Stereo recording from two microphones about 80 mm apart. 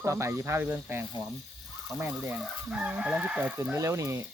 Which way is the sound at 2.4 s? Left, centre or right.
Centre.